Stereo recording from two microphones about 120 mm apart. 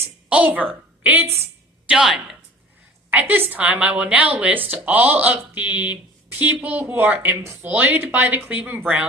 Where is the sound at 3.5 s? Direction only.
10° right (ahead or behind).